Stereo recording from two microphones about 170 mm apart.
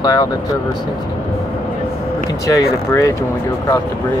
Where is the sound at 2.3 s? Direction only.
20° left (ahead or behind).